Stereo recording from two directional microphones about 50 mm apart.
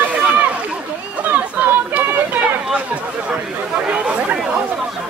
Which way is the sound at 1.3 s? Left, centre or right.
Right.